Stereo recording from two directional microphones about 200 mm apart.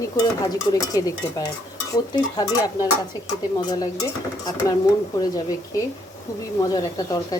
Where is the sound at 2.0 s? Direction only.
20° left (ahead or behind).